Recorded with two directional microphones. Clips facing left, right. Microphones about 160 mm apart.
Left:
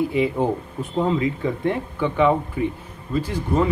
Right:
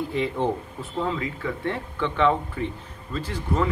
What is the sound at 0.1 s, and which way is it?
Speech, 10° left (ahead or behind).